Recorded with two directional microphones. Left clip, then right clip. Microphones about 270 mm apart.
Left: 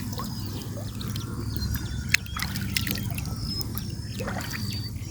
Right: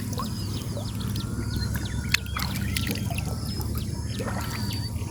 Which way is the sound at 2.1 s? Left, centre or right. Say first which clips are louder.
Left 1 dB; centre.